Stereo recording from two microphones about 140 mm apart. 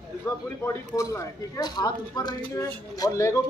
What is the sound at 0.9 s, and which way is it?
Speech, 25° left (ahead or behind).